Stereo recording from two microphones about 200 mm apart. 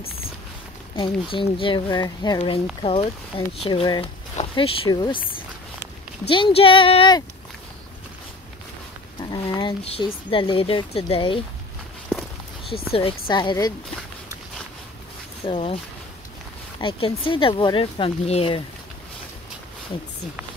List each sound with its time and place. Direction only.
0.9 s speech: 25° left (ahead or behind)
6.2 s speech: 25° left (ahead or behind)
9.2 s speech: 20° left (ahead or behind)
12.9 s speech: 25° left (ahead or behind)
15.4 s speech: 30° left (ahead or behind)
16.8 s speech: 25° left (ahead or behind)